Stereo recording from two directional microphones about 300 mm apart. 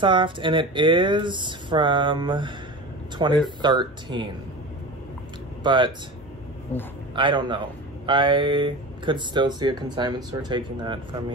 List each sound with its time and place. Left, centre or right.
0.0 s speech: centre
5.6 s speech: centre
6.7 s a man's voice: centre
7.2 s speech: centre